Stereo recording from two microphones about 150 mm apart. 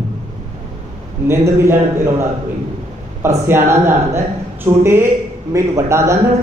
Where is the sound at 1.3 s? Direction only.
20° right (ahead or behind).